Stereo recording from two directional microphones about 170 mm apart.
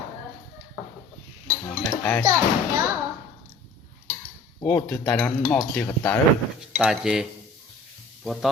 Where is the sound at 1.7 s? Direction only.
5° left (ahead or behind).